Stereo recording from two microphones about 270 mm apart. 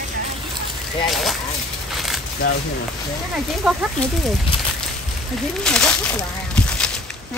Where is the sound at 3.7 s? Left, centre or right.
Centre.